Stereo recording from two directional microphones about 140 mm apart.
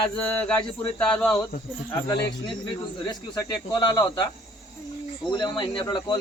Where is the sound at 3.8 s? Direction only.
30° left (ahead or behind).